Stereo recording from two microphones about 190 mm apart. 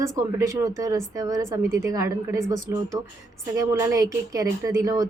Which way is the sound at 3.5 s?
15° right (ahead or behind).